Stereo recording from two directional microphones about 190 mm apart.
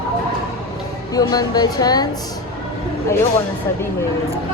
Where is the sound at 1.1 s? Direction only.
20° left (ahead or behind).